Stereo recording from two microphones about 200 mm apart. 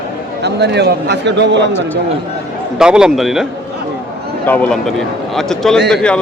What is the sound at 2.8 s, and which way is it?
Speech, 5° right (ahead or behind).